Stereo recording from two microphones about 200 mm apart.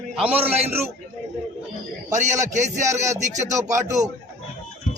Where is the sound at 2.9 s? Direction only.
15° right (ahead or behind).